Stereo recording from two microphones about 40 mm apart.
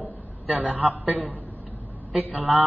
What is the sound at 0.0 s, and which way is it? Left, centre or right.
A man's voice, right.